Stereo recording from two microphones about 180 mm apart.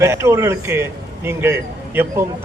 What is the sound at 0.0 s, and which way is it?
A man's voice, 15° right (ahead or behind).